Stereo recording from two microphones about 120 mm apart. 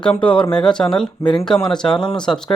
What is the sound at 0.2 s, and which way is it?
Speech, 10° left (ahead or behind).